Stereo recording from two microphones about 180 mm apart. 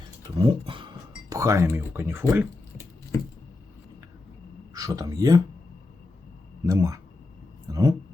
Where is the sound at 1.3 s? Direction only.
15° right (ahead or behind).